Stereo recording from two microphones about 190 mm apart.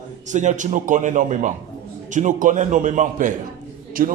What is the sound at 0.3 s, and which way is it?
A man's voice, 40° right (ahead or behind).